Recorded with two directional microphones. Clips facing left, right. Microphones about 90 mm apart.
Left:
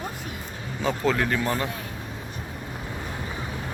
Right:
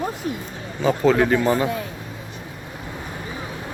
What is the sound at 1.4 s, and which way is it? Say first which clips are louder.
Speech: right 7 dB; 15° right (ahead or behind).